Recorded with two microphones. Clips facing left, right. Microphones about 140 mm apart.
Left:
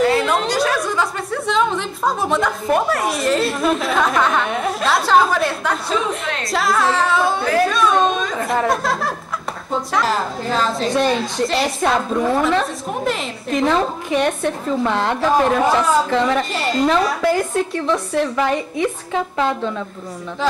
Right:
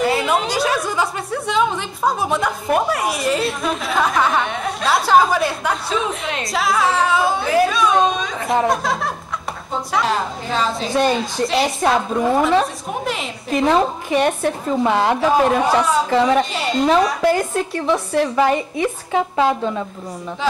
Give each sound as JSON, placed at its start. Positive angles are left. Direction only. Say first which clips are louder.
{"t": 0.0, "sound": "a woman's voice", "louder": "left 2 dB", "side_deg": -5}